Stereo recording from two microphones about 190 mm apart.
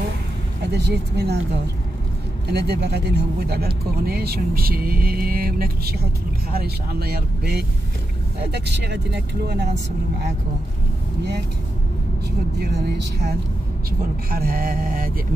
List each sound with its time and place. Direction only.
0.7 s speech: 60° right (ahead or behind)
2.5 s speech: 60° right (ahead or behind)
12.5 s speech: 60° right (ahead or behind)
13.8 s speech: 50° right (ahead or behind)